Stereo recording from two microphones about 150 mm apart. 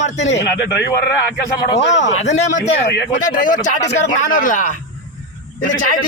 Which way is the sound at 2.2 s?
50° left (ahead or behind).